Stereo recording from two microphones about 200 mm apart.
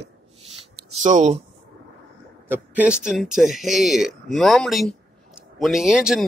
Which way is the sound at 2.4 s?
10° right (ahead or behind).